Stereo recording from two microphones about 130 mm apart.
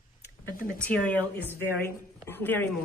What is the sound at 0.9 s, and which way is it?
A woman's voice, 10° left (ahead or behind).